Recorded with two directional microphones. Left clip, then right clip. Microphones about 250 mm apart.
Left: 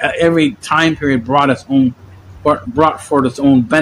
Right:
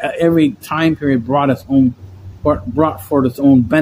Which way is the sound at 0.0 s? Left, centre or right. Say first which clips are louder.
Left 1 dB; centre.